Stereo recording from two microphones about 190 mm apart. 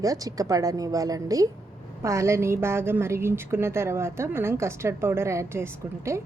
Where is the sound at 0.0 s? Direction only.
20° right (ahead or behind).